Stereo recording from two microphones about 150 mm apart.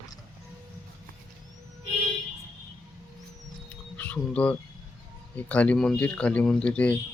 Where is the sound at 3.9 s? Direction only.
10° left (ahead or behind).